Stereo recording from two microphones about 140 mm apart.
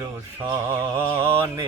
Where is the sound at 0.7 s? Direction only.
20° right (ahead or behind).